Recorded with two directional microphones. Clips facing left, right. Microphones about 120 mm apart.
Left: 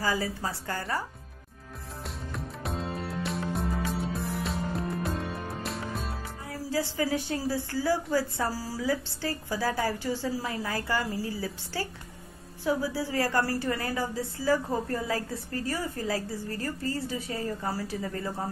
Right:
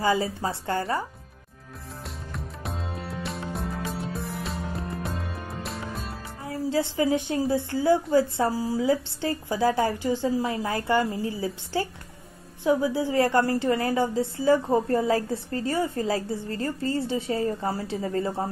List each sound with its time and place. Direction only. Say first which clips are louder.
0.0 s a woman's voice: right 5 dB; 25° right (ahead or behind)
2.0 s music: left 1 dB; centre (ahead or behind)
6.4 s a woman's voice: right 5 dB; 25° right (ahead or behind)
10.4 s a woman's voice: right 5 dB; 30° right (ahead or behind)